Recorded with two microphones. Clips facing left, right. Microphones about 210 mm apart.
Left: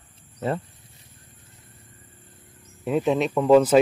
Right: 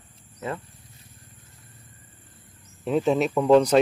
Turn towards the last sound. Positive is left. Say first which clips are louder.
# left 1 dB
turn(degrees=5)  # may be behind; listen again after turning